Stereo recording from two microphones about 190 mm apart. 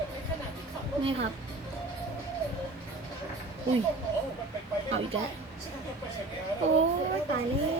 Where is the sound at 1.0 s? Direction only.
30° right (ahead or behind).